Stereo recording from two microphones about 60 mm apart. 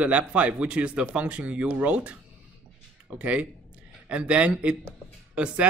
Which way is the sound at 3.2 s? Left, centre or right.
Right.